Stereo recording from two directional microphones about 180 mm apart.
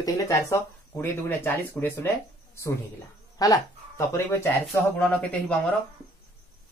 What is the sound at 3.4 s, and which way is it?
Speech, 20° left (ahead or behind).